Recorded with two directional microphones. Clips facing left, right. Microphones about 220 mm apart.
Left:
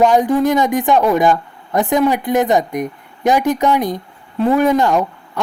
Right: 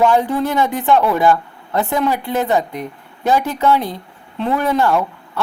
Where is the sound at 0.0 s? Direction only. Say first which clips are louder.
Left 3 dB; 15° left (ahead or behind).